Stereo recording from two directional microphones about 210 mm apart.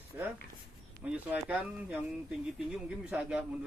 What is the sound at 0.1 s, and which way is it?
A man's voice, 10° right (ahead or behind).